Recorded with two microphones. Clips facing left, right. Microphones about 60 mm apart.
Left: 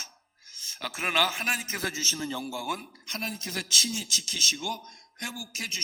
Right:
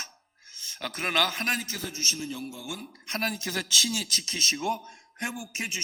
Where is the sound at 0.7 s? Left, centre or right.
Centre.